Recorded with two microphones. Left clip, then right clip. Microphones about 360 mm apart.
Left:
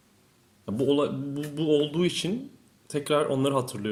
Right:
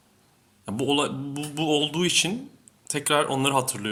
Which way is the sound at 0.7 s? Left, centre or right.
Centre.